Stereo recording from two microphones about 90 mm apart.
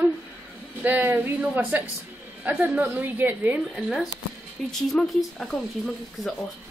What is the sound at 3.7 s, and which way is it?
Speech, centre (ahead or behind).